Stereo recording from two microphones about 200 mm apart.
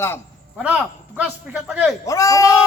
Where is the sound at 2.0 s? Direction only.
15° left (ahead or behind).